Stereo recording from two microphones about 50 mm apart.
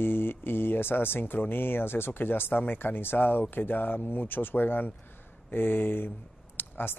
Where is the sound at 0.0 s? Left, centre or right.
Left.